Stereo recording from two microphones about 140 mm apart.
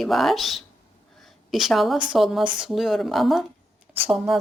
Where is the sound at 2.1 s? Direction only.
Centre (ahead or behind).